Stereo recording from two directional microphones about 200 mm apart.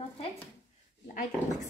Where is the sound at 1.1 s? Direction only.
40° left (ahead or behind).